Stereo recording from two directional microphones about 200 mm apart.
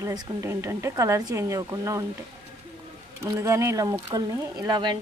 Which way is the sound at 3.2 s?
15° right (ahead or behind).